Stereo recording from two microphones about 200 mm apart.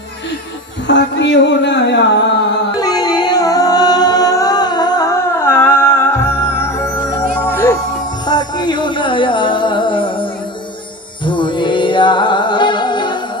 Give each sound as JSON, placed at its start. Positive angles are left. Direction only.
{"t": 0.8, "sound": "music", "side_deg": 65}
{"t": 2.7, "sound": "music", "side_deg": 20}
{"t": 11.2, "sound": "music", "side_deg": 25}